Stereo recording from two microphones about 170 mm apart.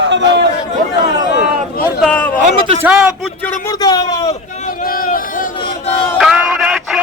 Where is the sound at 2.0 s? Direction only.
10° left (ahead or behind).